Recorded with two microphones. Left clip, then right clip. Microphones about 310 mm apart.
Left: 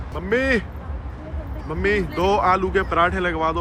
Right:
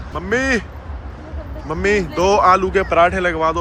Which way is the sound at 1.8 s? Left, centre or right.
Centre.